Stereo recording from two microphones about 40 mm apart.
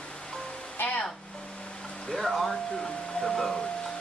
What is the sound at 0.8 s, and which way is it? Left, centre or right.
Speech, left.